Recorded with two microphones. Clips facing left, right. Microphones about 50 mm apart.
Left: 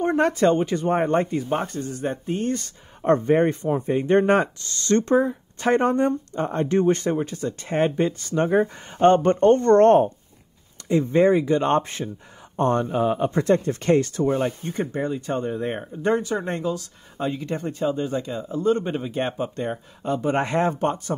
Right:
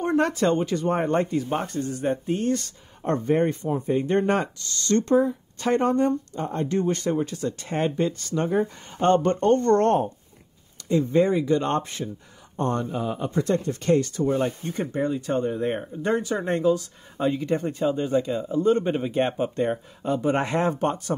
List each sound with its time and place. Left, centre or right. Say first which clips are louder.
0.0 s a sound: left 2 dB; centre
0.3 s speech: left 3 dB; centre
3.0 s speech: left 4 dB; left
7.0 s speech: left 1 dB; centre
8.4 s speech: left 4 dB; left
9.8 s speech: left 6 dB; left
10.9 s speech: left 3 dB; left
12.5 s speech: left 5 dB; left
14.4 s speech: left 1 dB; centre